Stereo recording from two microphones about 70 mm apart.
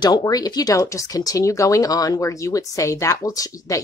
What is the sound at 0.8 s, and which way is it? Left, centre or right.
Speech, left.